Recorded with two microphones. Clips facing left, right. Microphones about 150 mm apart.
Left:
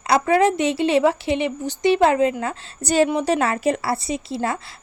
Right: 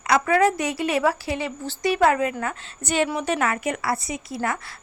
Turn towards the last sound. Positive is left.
turn(degrees=25)  # may be behind; listen again after turning